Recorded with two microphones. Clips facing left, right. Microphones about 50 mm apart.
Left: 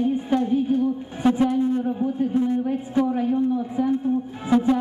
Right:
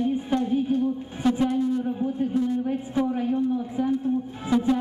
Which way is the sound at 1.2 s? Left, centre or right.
Centre.